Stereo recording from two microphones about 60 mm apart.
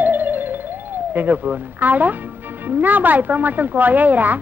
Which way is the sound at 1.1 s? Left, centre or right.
Right.